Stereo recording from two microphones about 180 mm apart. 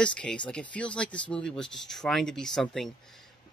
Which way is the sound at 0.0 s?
5° left (ahead or behind).